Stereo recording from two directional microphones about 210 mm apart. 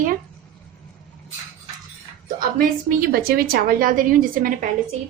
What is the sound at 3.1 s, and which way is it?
A woman's voice, 45° right (ahead or behind).